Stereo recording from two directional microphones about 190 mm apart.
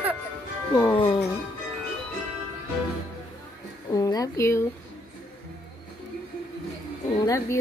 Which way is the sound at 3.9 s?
20° left (ahead or behind).